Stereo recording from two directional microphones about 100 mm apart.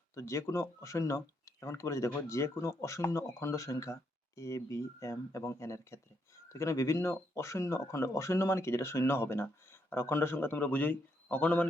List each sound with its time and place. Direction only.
0.1 s speech: 30° left (ahead or behind)